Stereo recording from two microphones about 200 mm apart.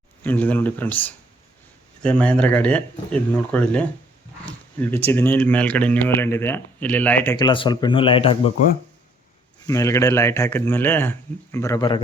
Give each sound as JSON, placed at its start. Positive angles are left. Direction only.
{"t": 0.2, "sound": "speech", "side_deg": 10}
{"t": 7.3, "sound": "speech", "side_deg": 25}
{"t": 9.6, "sound": "speech", "side_deg": 15}